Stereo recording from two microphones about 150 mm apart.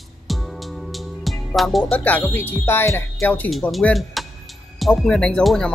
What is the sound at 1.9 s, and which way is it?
Speech, 10° left (ahead or behind).